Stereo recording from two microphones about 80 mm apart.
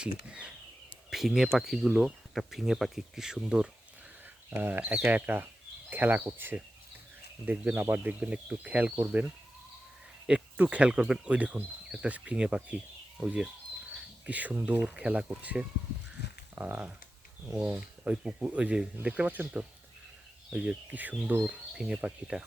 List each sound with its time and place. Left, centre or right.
0.0 s speech: centre
4.5 s speech: right
7.4 s speech: centre